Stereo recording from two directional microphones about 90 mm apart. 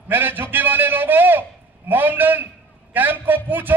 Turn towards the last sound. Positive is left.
turn(degrees=-20)  # may be behind; listen again after turning